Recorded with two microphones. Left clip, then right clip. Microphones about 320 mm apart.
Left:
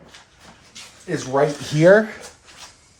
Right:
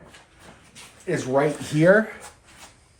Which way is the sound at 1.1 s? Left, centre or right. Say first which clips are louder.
Even; centre.